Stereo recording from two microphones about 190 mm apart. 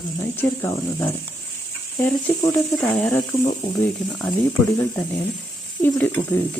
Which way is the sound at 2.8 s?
5° left (ahead or behind).